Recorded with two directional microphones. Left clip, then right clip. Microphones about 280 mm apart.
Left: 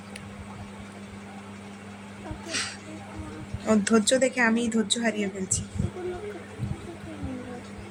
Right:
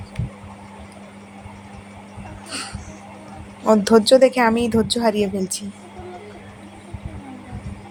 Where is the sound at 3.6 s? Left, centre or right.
Centre.